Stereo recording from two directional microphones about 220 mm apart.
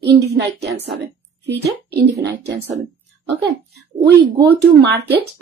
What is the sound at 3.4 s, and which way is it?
A woman's voice, 50° right (ahead or behind).